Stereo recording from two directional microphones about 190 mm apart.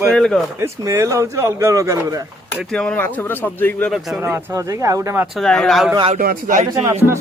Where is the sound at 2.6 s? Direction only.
Centre (ahead or behind).